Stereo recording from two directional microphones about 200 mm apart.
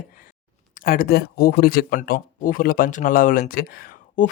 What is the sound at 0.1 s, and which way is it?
Speech, 40° left (ahead or behind).